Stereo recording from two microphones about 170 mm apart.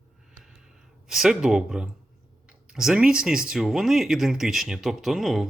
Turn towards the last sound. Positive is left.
turn(degrees=0)  # may be behind; listen again after turning